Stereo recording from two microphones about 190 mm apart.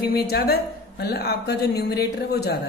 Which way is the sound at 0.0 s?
55° left (ahead or behind).